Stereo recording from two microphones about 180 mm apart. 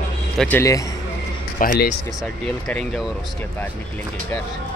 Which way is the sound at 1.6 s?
50° left (ahead or behind).